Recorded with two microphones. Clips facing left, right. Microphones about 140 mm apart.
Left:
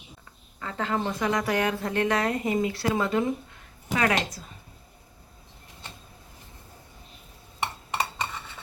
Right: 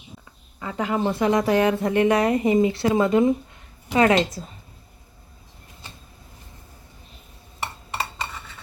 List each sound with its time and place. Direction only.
0.6 s a woman's voice: 15° right (ahead or behind)